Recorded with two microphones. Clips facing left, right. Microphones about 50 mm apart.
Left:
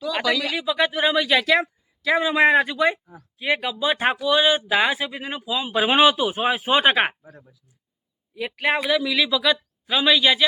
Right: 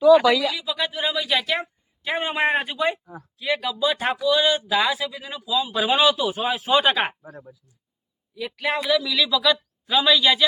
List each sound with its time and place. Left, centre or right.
0.4 s a man's voice: left
3.3 s speech: left
7.2 s speech: right
8.4 s a man's voice: left